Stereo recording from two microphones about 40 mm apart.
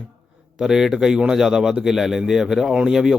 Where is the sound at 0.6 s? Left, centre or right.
Centre.